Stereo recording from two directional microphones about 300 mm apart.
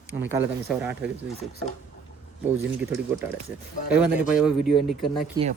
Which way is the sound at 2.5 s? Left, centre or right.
Centre.